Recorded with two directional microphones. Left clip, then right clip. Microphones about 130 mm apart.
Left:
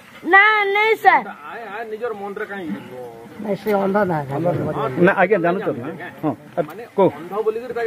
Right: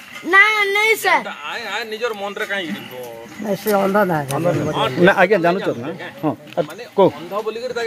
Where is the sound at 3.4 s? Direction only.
90° right.